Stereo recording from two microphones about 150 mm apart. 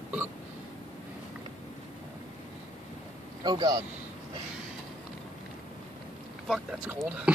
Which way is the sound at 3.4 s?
25° right (ahead or behind).